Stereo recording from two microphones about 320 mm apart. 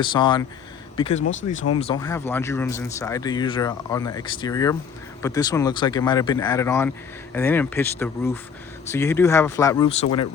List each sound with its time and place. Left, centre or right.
0.0 s speech: centre
1.2 s speech: left
1.8 s speech: centre